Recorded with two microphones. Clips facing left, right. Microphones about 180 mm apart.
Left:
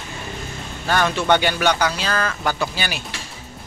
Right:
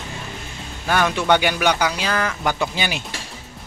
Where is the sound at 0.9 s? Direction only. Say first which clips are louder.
Even; 10° right (ahead or behind).